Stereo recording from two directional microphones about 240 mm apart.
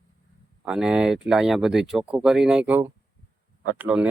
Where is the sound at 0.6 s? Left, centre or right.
Centre.